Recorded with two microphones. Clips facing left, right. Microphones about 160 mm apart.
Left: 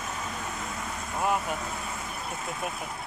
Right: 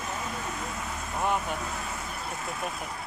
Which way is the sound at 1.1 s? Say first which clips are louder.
Left 1 dB; 5° left (ahead or behind).